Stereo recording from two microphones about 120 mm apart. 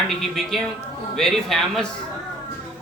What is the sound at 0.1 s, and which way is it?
Speech, centre (ahead or behind).